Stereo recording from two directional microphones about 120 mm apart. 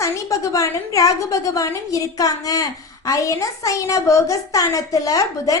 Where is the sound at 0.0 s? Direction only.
25° left (ahead or behind).